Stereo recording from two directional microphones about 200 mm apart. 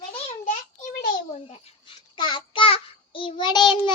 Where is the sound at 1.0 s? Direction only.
35° left (ahead or behind).